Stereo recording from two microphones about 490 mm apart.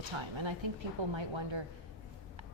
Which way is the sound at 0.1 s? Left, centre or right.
Right.